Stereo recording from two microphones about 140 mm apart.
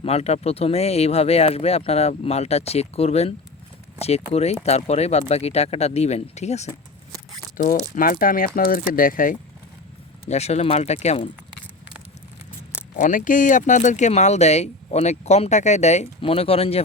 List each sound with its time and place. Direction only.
0.0 s speech: 50° left (ahead or behind)
7.5 s speech: 75° left (ahead or behind)
7.9 s speech: 85° left
10.2 s speech: 50° left (ahead or behind)
13.0 s speech: 70° left (ahead or behind); by 16.8 s 45° left (ahead or behind)